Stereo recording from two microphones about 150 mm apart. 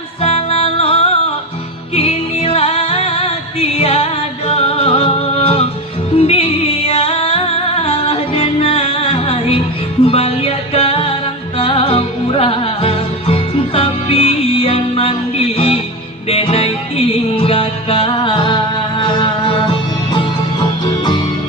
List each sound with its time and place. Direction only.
0.2 s music: 45° left (ahead or behind)